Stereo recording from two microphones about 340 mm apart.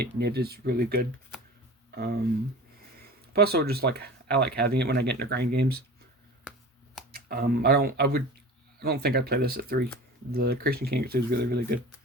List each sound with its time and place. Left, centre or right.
0.0 s speech: right
3.3 s speech: right
6.5 s finger snapping: centre
7.1 s speech: right